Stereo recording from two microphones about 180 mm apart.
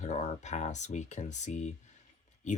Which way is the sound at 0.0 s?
40° left (ahead or behind).